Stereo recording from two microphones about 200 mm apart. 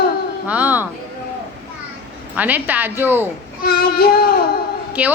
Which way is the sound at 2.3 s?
10° right (ahead or behind).